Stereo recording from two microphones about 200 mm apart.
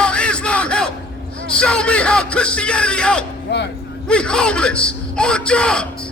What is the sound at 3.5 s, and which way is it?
Speech, 60° left (ahead or behind).